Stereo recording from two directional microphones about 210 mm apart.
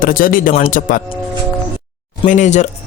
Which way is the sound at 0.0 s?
40° left (ahead or behind).